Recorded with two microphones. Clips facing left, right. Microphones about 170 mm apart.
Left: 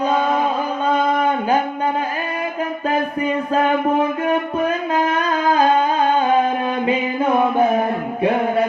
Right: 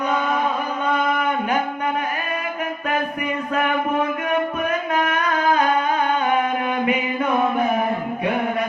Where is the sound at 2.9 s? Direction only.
30° left (ahead or behind).